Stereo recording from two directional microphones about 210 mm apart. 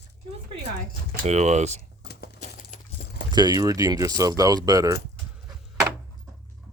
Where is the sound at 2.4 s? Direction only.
40° left (ahead or behind).